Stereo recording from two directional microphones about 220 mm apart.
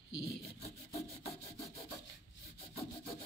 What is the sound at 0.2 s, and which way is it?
Rub, 25° left (ahead or behind).